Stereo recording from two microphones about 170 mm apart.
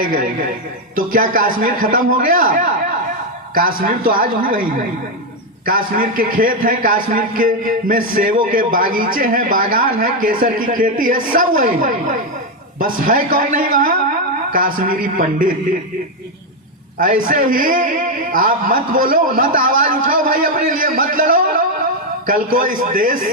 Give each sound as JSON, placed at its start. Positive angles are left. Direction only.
{"t": 0.9, "sound": "a man's voice", "side_deg": -55}
{"t": 5.6, "sound": "a man's voice", "side_deg": -55}
{"t": 17.0, "sound": "a man's voice", "side_deg": -55}